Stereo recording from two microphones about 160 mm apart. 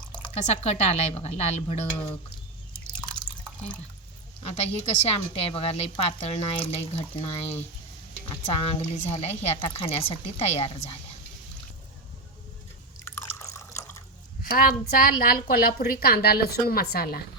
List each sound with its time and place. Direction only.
0.0 s drip: 5° left (ahead or behind)
0.4 s a woman's voice: 40° left (ahead or behind)
4.4 s a woman's voice: 40° left (ahead or behind)
13.1 s drip: 15° left (ahead or behind)
14.5 s a woman's voice: 65° left (ahead or behind)